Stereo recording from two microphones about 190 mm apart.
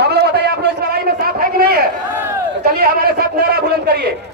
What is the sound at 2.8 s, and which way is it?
A man's voice, 55° right (ahead or behind).